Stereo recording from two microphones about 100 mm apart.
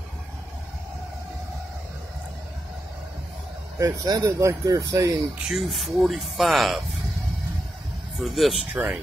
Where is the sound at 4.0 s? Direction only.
35° right (ahead or behind).